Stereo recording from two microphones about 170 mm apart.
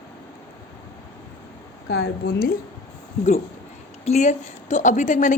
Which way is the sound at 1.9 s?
75° left (ahead or behind).